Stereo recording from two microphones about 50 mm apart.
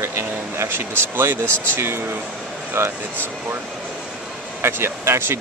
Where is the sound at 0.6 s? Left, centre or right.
Right.